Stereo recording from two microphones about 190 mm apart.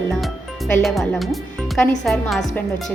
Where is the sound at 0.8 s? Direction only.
Centre (ahead or behind).